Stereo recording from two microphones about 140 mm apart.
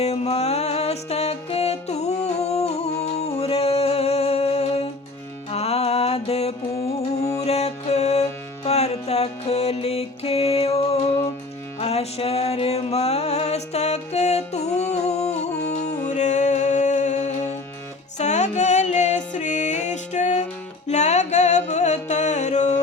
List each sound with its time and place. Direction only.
0.0 s music: 50° left (ahead or behind)
7.2 s music: 25° left (ahead or behind)
7.4 s music: 50° left (ahead or behind)